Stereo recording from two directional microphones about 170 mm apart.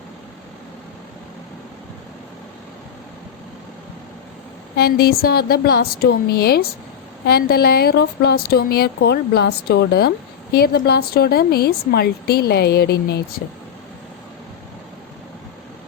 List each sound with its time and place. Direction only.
4.8 s a woman's voice: 65° left (ahead or behind)